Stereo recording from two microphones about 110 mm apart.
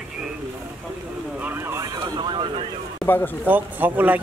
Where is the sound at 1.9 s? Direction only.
40° right (ahead or behind).